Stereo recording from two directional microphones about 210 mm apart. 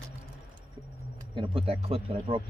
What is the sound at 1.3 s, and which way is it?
Speech, 25° right (ahead or behind).